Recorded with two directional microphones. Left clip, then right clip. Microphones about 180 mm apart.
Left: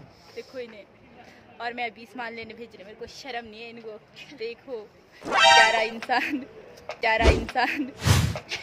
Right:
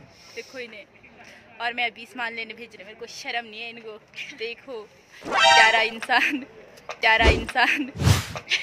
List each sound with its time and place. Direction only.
0.6 s a woman's voice: 10° right (ahead or behind)
8.5 s beatboxing: 45° left (ahead or behind)